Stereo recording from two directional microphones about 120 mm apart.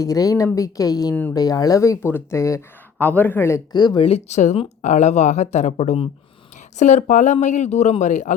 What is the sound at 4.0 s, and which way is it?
Speech, 65° left (ahead or behind).